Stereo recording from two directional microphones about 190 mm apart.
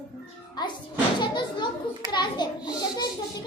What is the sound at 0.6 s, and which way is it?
A child's voice, 20° left (ahead or behind).